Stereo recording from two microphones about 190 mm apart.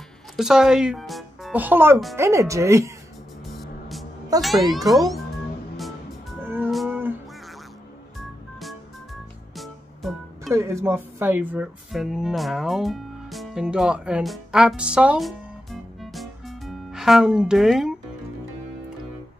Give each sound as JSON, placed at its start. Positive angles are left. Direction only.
{"t": 0.4, "sound": "speech", "side_deg": -5}
{"t": 4.4, "sound": "speech", "side_deg": 0}
{"t": 6.4, "sound": "music", "side_deg": -10}
{"t": 6.7, "sound": "a sound", "side_deg": 0}
{"t": 9.6, "sound": "music", "side_deg": 0}
{"t": 10.5, "sound": "speech", "side_deg": -15}